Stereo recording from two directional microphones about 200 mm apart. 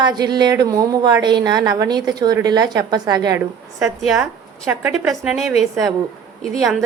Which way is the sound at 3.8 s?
Centre (ahead or behind).